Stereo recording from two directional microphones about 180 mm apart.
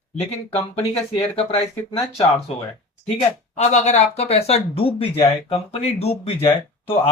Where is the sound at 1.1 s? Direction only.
30° left (ahead or behind).